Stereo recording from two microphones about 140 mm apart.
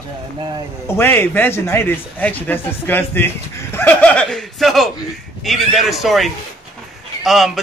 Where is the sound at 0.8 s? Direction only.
15° left (ahead or behind).